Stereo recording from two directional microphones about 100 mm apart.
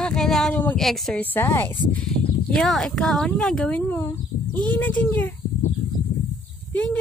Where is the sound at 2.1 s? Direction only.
5° left (ahead or behind).